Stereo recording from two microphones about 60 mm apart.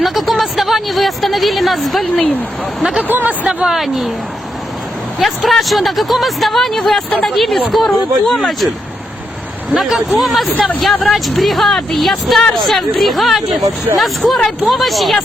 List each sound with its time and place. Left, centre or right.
0.0 s a woman's voice: centre
3.0 s speech: right
3.4 s speech: centre
3.8 s speech: centre
5.2 s speech: centre
9.7 s speech: centre